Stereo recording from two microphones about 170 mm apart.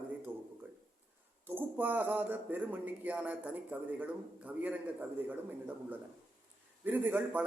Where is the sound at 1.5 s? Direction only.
10° right (ahead or behind).